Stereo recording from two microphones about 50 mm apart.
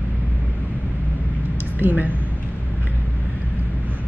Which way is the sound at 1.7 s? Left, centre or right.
Right.